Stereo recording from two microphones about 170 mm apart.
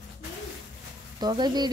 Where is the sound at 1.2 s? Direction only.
25° right (ahead or behind).